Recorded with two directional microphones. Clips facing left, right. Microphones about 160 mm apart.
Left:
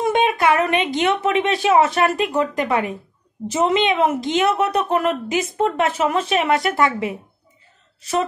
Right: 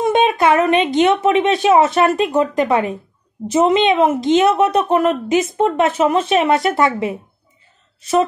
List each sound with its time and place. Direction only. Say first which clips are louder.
0.0 s a woman's voice: right 3 dB; 25° right (ahead or behind)